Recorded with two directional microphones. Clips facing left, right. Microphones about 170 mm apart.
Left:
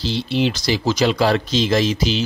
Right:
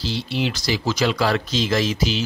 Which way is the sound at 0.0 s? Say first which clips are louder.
Left 4 dB; 25° left (ahead or behind).